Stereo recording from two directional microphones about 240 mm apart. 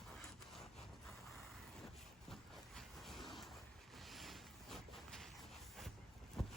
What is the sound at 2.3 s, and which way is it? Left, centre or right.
Vehicle, centre.